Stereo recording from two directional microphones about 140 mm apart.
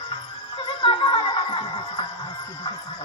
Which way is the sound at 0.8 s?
40° left (ahead or behind).